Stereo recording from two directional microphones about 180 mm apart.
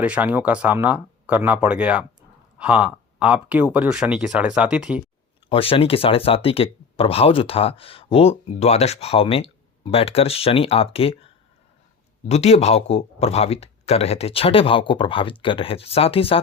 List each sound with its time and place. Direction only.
0.0 s speech: 5° right (ahead or behind)
5.5 s speech: 30° left (ahead or behind)
12.3 s speech: 35° left (ahead or behind)